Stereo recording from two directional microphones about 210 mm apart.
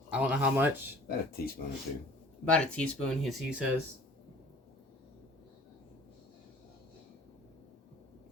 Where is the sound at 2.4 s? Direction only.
5° left (ahead or behind).